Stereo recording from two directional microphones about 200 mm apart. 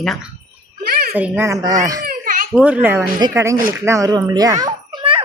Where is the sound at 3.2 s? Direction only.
15° right (ahead or behind).